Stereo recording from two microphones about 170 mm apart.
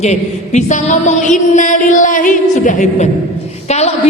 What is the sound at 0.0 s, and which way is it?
Music, 40° left (ahead or behind).